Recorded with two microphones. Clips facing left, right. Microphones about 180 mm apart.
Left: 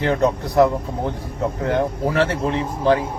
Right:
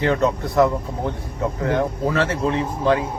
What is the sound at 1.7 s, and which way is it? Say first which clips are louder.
Speech: left 1 dB; 30° left (ahead or behind).